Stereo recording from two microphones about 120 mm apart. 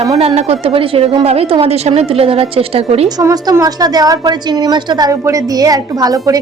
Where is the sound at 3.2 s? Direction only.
25° right (ahead or behind).